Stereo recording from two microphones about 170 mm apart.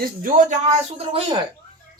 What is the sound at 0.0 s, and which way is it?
Speech, 55° right (ahead or behind).